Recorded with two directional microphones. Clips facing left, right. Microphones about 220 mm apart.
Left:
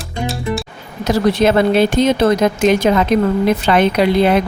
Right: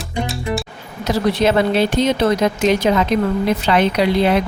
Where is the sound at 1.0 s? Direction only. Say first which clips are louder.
Left 3 dB; 50° left (ahead or behind).